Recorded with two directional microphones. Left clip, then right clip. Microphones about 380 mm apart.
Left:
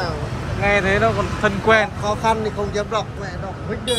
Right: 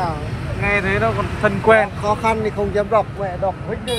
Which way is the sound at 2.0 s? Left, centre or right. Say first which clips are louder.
Right 1 dB; right.